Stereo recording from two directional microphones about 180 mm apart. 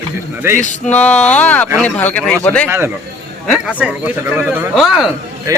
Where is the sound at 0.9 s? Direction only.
5° left (ahead or behind).